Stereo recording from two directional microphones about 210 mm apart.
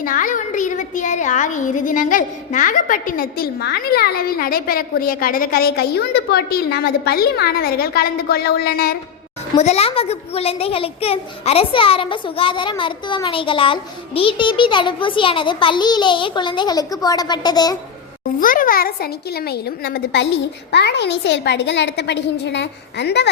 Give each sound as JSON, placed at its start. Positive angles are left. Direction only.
{"t": 0.0, "sound": "a child's voice", "side_deg": 40}
{"t": 9.6, "sound": "a child's voice", "side_deg": 30}
{"t": 18.3, "sound": "a child's voice", "side_deg": 40}